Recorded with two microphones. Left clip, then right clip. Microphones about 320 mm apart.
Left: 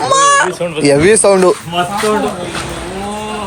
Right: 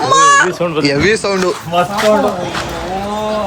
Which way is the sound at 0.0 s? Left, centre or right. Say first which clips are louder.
Right 1 dB; centre.